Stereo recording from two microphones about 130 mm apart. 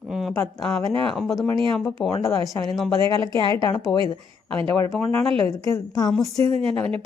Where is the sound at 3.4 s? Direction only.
30° left (ahead or behind).